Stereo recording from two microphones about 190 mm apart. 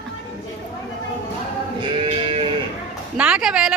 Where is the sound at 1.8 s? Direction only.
25° right (ahead or behind).